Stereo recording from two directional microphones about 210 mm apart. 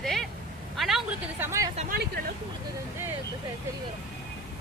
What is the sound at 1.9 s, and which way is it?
Speech, 50° right (ahead or behind).